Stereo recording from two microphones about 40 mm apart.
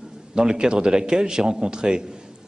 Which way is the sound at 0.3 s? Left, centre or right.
Centre.